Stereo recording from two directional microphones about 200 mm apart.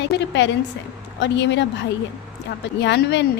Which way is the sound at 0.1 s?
65° left (ahead or behind).